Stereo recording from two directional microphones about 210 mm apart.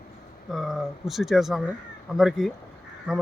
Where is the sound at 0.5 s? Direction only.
Centre (ahead or behind).